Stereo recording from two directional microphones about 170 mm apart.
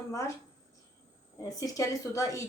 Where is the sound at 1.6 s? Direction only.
20° left (ahead or behind).